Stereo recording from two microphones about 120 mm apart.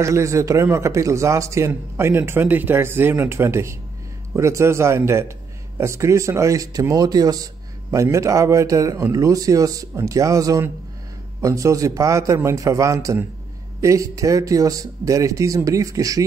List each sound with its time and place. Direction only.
0.0 s a man's voice: 25° right (ahead or behind)